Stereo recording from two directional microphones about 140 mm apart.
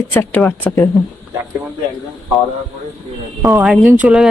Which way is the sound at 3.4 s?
15° right (ahead or behind).